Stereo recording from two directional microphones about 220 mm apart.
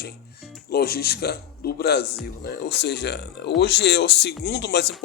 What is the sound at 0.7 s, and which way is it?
A man's voice, 45° left (ahead or behind).